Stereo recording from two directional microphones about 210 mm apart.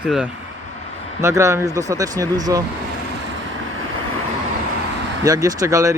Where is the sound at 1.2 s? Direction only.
15° right (ahead or behind).